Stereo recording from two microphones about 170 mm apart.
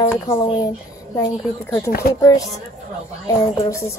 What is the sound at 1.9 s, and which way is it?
Speech, 65° left (ahead or behind).